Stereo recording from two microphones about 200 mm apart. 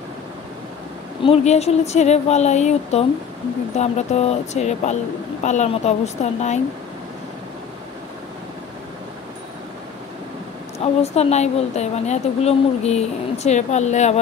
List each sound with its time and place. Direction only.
1.2 s speech: 30° left (ahead or behind)
10.8 s speech: 30° left (ahead or behind)